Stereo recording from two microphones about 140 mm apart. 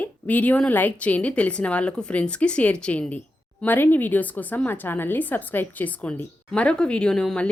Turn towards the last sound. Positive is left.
turn(degrees=5)  # may be behind; listen again after turning